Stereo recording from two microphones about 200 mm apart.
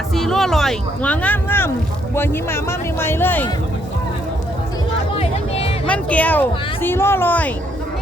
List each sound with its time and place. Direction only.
0.1 s speech: centre (ahead or behind)
5.1 s music: 30° left (ahead or behind)
5.9 s speech: 5° left (ahead or behind)